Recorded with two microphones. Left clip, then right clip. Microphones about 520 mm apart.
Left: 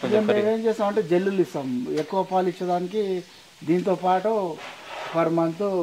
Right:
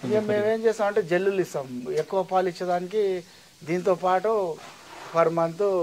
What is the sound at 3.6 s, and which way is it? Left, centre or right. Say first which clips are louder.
Speech: left 1 dB; right.